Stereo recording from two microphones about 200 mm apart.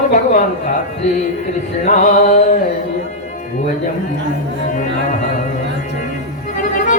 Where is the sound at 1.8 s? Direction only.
40° left (ahead or behind).